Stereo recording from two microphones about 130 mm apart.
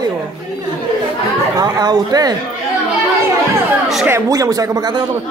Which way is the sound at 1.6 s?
30° right (ahead or behind).